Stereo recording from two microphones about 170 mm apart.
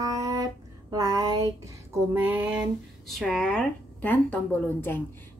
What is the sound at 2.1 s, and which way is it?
Speech, 10° right (ahead or behind).